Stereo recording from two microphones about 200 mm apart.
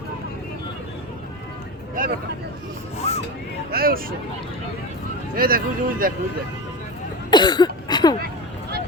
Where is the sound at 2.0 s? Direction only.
45° right (ahead or behind).